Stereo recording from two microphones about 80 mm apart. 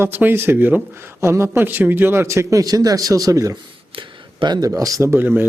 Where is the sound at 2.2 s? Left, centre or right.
Right.